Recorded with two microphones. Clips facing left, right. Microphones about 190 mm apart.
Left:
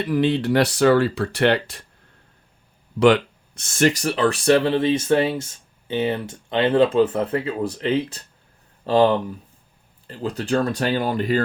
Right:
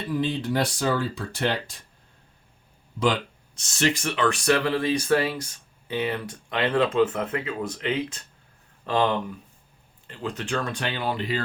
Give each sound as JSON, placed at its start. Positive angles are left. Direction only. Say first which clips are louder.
{"t": 0.0, "sound": "speech", "louder": "left 7 dB", "side_deg": 75}
{"t": 3.0, "sound": "speech", "louder": "left 9 dB", "side_deg": 60}